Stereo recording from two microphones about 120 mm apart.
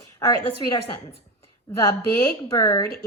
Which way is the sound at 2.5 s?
35° left (ahead or behind).